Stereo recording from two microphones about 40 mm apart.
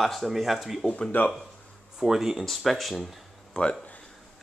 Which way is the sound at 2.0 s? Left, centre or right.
Centre.